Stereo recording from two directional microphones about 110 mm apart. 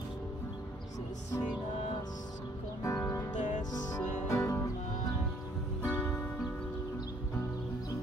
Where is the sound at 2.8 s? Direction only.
30° left (ahead or behind).